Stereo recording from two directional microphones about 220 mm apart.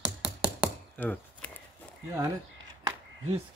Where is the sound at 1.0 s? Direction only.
5° left (ahead or behind).